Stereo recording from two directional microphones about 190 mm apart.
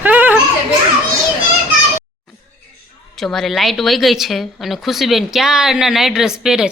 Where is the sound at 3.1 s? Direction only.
Centre (ahead or behind).